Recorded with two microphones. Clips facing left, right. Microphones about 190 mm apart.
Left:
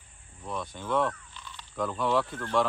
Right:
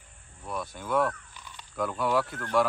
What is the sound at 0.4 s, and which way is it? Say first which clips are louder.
Speech: even; 10° right (ahead or behind).